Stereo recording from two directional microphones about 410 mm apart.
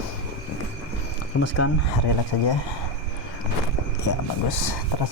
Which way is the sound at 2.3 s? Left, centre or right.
Left.